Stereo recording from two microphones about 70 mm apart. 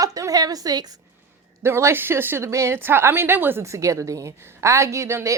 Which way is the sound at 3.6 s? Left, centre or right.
Right.